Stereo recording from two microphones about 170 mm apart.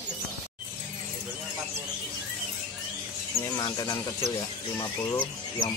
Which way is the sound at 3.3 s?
20° left (ahead or behind).